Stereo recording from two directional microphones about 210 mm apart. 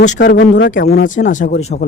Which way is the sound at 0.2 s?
50° left (ahead or behind).